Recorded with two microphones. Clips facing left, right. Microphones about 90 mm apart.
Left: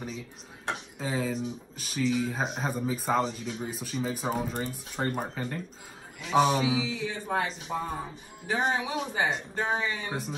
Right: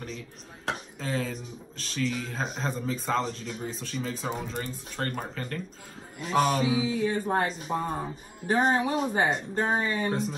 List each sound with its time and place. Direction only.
0.9 s speech: 10° left (ahead or behind)
6.3 s a sound: centre (ahead or behind)
6.8 s speech: 45° right (ahead or behind)